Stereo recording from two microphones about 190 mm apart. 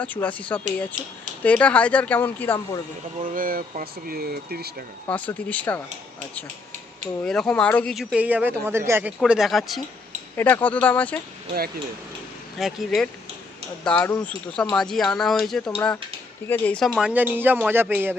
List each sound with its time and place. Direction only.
0.0 s speech: 10° left (ahead or behind)
3.2 s speech: 45° right (ahead or behind)
5.0 s speech: 10° left (ahead or behind)
7.3 s speech: 5° left (ahead or behind)
12.5 s speech: centre (ahead or behind)